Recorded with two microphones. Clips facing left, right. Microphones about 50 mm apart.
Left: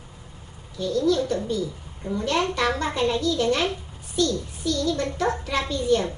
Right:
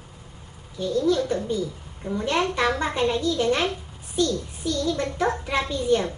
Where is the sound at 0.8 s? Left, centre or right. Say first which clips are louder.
Even; right.